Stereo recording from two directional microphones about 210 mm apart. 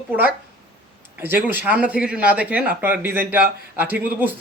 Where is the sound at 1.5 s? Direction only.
5° right (ahead or behind).